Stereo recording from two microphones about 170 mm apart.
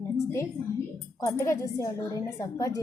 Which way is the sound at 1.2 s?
20° left (ahead or behind).